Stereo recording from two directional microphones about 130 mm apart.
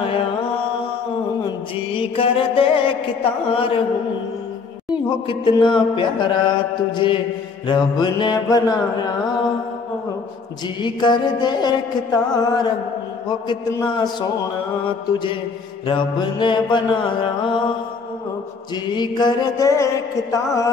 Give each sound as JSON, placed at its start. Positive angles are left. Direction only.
{"t": 2.0, "sound": "music", "side_deg": 45}
{"t": 5.3, "sound": "mantra", "side_deg": 40}
{"t": 10.8, "sound": "mantra", "side_deg": 35}
{"t": 13.8, "sound": "mantra", "side_deg": 35}
{"t": 15.9, "sound": "mantra", "side_deg": 35}
{"t": 18.9, "sound": "mantra", "side_deg": 35}